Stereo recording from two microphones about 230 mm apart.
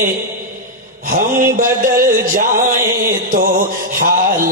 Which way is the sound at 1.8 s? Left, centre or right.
Right.